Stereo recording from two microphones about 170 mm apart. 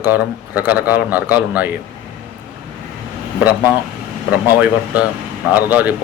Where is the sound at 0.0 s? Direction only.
10° right (ahead or behind).